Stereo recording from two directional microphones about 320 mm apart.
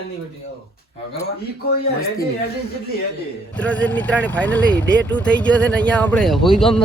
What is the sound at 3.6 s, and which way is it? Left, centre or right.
Speech, centre.